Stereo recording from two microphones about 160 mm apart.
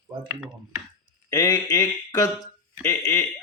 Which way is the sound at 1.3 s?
25° left (ahead or behind).